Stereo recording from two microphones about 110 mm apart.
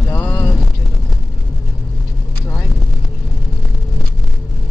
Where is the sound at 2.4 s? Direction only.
15° left (ahead or behind).